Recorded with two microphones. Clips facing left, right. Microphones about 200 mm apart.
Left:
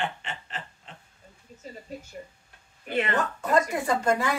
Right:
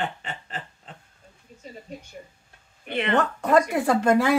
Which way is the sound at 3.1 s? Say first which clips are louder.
Right 6 dB; 60° right (ahead or behind).